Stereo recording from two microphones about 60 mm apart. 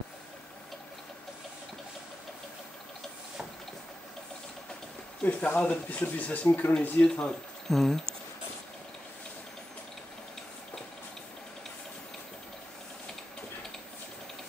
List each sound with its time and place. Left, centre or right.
5.2 s speech: left
7.0 s speech: centre